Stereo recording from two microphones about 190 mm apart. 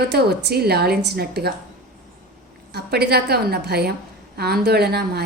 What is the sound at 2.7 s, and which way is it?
A woman's voice, 60° right (ahead or behind).